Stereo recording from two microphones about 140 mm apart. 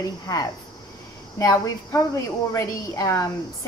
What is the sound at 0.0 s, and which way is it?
A woman's voice, 25° left (ahead or behind).